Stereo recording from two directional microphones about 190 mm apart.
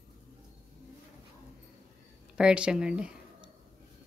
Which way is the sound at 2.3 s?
5° right (ahead or behind).